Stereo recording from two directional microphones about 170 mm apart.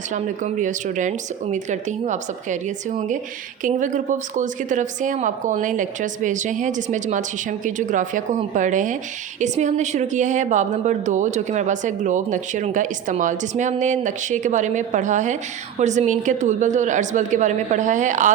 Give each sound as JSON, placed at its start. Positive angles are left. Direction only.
{"t": 0.1, "sound": "a woman's voice", "side_deg": -45}